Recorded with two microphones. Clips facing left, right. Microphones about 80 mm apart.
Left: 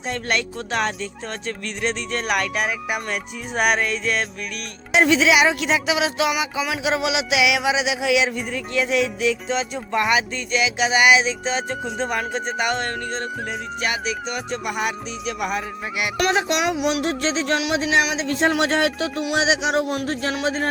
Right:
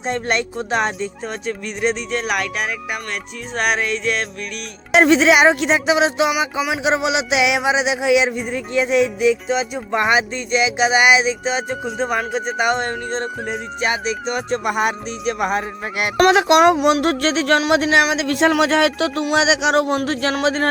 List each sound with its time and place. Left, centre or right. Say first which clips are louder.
0.1 s a sound: right 4 dB; right
1.5 s speech: right 5 dB; centre
2.1 s speech: right 1 dB; centre
4.9 s music: right 4 dB; right
6.6 s a sound: right 3 dB; right
11.9 s speech: right 4 dB; centre
12.6 s a sound: right 4 dB; right
13.8 s music: right 5 dB; right
16.3 s speech: right 11 dB; right